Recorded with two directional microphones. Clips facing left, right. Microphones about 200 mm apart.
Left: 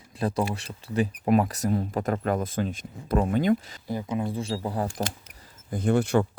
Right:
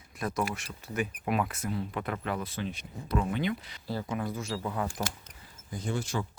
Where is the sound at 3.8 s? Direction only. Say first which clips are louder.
Left 3 dB; 20° left (ahead or behind); by 4.9 s 35° left (ahead or behind).